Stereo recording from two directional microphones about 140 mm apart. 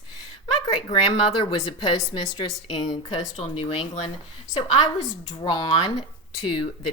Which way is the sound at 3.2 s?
45° left (ahead or behind).